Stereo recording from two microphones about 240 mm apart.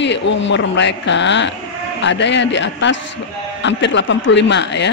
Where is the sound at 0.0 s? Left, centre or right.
Left.